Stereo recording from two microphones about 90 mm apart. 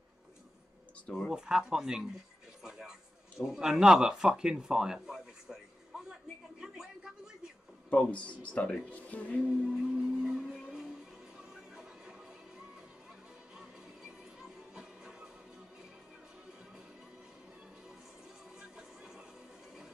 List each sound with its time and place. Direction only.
1.0 s speech: 5° left (ahead or behind)
1.3 s speech: 10° right (ahead or behind)
2.6 s music: 5° right (ahead or behind)
3.4 s speech: 5° right (ahead or behind)
6.6 s a sound: 5° right (ahead or behind)
7.9 s speech: 15° left (ahead or behind)
9.7 s music: 5° right (ahead or behind)
14.7 s music: 5° right (ahead or behind)
18.6 s music: 5° right (ahead or behind)